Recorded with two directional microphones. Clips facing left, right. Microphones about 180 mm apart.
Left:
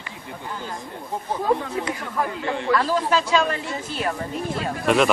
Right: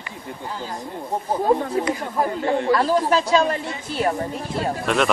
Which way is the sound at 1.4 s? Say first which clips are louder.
Right 3 dB; 35° right (ahead or behind).